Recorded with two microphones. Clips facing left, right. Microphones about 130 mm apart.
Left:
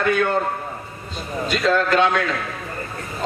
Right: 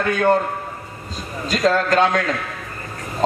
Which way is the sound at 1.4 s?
40° right (ahead or behind).